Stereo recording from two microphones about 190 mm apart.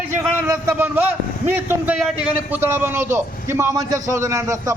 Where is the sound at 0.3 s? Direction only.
15° right (ahead or behind).